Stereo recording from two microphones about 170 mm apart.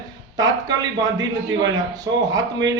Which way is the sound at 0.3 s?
25° right (ahead or behind).